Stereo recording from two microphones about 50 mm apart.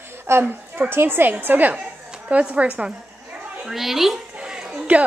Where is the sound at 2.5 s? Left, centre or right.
Right.